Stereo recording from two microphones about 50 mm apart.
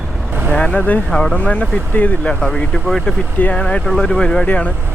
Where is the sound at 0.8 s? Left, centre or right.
Left.